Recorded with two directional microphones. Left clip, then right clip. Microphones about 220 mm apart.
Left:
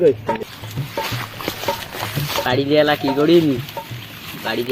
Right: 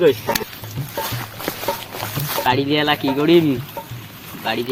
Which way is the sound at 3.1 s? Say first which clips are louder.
Even; 25° right (ahead or behind).